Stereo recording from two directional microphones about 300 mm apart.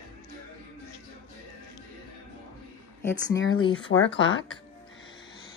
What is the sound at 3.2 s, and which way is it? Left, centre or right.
Speech, left.